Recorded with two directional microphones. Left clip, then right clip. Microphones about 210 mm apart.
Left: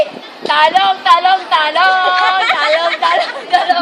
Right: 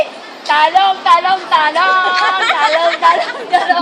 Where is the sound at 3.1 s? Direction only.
35° left (ahead or behind).